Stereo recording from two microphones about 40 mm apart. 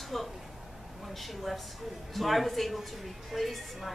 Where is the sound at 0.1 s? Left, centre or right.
Centre.